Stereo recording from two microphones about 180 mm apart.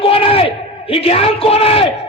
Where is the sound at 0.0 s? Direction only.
30° left (ahead or behind).